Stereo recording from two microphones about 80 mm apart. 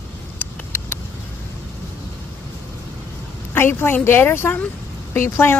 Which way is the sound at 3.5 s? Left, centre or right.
Left.